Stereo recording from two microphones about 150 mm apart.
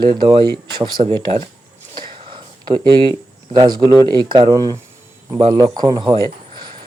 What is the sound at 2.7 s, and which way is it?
Speech, 30° right (ahead or behind).